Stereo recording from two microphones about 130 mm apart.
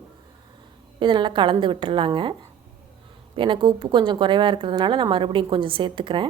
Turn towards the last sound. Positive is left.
turn(degrees=-40)  # may be behind; listen again after turning